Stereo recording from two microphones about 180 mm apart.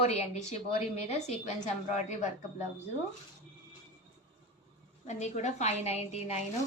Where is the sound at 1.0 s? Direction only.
35° left (ahead or behind).